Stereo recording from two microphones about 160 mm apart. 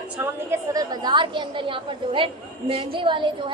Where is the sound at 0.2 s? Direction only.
15° right (ahead or behind).